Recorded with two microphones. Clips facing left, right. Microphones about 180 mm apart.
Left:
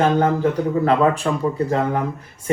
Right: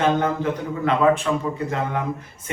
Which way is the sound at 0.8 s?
35° left (ahead or behind).